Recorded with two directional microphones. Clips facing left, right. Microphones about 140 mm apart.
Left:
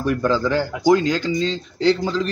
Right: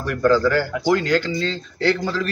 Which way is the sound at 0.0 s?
15° left (ahead or behind).